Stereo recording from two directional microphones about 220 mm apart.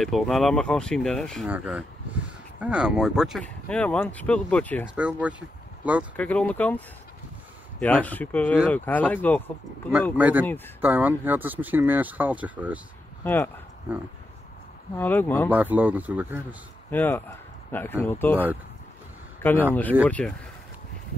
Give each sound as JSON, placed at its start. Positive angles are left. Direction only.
{"t": 0.0, "sound": "speech", "side_deg": 0}
{"t": 4.8, "sound": "speech", "side_deg": -5}
{"t": 6.1, "sound": "speech", "side_deg": 5}
{"t": 7.8, "sound": "speech", "side_deg": 5}
{"t": 10.1, "sound": "speech", "side_deg": -5}
{"t": 13.2, "sound": "speech", "side_deg": 10}
{"t": 15.0, "sound": "speech", "side_deg": 10}
{"t": 15.5, "sound": "speech", "side_deg": -5}
{"t": 16.9, "sound": "speech", "side_deg": 10}
{"t": 19.4, "sound": "speech", "side_deg": 10}